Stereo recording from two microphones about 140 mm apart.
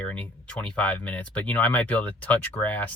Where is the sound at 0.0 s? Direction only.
10° left (ahead or behind).